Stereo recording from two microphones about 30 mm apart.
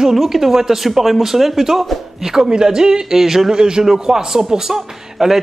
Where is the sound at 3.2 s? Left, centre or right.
Centre.